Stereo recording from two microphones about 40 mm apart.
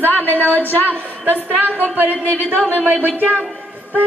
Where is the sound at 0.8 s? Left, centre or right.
Right.